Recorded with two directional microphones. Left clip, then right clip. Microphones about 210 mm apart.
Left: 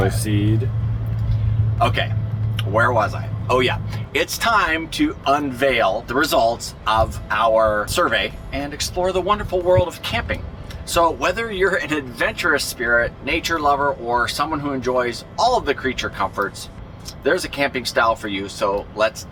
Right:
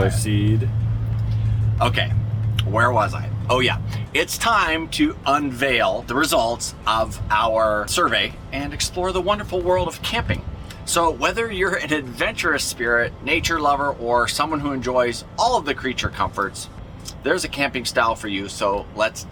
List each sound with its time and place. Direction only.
0.1 s speech: 10° left (ahead or behind)
1.8 s speech: 15° right (ahead or behind)